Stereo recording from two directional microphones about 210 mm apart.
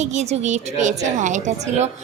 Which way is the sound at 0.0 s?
35° right (ahead or behind).